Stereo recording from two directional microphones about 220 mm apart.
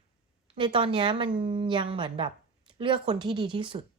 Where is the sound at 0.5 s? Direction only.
20° right (ahead or behind).